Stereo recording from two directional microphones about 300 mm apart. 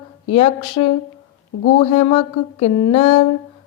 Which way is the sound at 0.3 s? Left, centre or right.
Centre.